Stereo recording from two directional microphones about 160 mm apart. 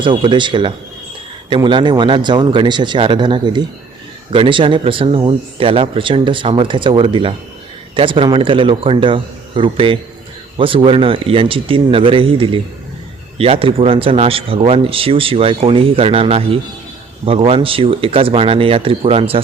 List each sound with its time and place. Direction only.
0.0 s speech: 30° right (ahead or behind)